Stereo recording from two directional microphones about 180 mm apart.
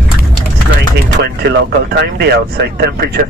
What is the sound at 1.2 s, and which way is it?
Speech, 65° right (ahead or behind).